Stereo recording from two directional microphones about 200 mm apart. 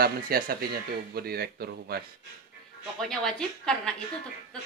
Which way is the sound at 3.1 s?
5° left (ahead or behind).